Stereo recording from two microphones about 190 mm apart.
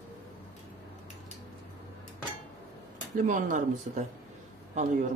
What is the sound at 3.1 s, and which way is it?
Speech, 45° right (ahead or behind).